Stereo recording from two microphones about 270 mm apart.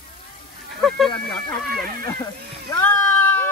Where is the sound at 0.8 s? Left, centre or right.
Centre.